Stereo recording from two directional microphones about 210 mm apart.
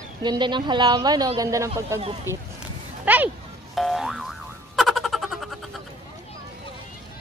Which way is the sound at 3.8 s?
Centre (ahead or behind).